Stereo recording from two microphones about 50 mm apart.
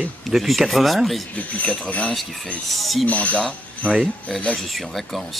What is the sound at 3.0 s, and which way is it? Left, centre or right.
Speech, left.